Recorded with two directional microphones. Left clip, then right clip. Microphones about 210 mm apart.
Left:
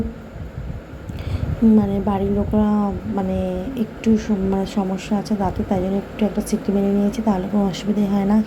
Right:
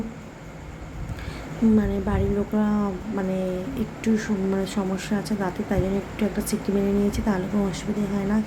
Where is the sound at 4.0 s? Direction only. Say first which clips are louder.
Left 5 dB; centre (ahead or behind).